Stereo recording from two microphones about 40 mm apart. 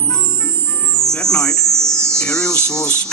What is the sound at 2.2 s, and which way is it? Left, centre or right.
Speech, left.